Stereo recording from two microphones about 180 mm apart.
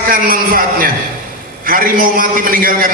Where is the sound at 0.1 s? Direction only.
50° right (ahead or behind).